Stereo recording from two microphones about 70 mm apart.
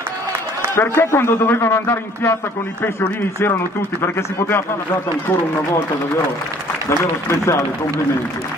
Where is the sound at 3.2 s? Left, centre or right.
Left.